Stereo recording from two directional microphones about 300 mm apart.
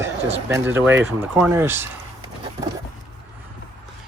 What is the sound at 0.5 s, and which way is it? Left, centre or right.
Speech, centre.